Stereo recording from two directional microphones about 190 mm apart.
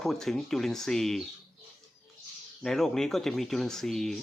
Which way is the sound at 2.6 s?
Centre (ahead or behind).